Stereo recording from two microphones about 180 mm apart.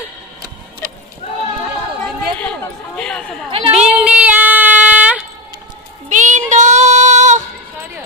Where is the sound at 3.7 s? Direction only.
5° right (ahead or behind).